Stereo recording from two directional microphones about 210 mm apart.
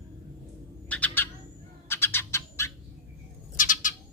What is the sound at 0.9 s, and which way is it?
Bird, 10° left (ahead or behind).